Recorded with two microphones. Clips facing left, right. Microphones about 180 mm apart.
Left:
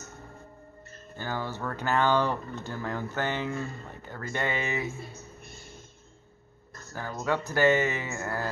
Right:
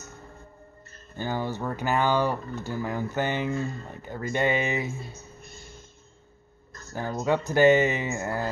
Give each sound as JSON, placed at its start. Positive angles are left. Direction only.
{"t": 1.1, "sound": "speech", "side_deg": -20}
{"t": 6.9, "sound": "speech", "side_deg": -20}